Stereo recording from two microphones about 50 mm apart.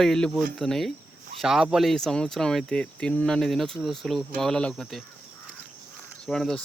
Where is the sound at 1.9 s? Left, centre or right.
Centre.